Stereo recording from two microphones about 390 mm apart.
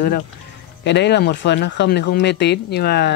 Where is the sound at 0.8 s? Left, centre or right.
Left.